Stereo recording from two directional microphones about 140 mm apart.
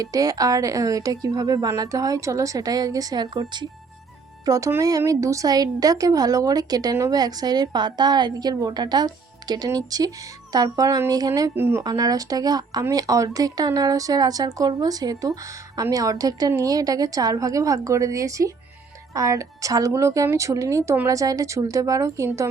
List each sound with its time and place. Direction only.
0.0 s speech: 25° right (ahead or behind)
11.9 s speech: 25° right (ahead or behind)